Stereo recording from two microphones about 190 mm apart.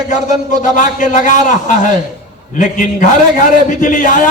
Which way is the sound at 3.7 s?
40° left (ahead or behind).